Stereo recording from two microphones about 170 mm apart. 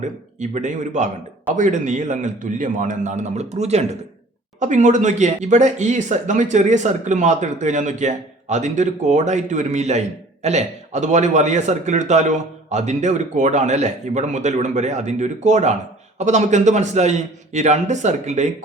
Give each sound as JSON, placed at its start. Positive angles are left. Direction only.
{"t": 0.3, "sound": "speech", "side_deg": -45}